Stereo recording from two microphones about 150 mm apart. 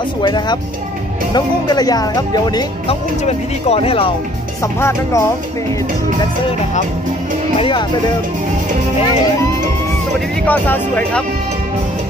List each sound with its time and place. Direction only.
0.2 s speech: 30° left (ahead or behind)
2.9 s speech: 45° left (ahead or behind)
4.7 s speech: 15° left (ahead or behind)
7.5 s speech: 35° left (ahead or behind)
10.4 s speech: 10° left (ahead or behind)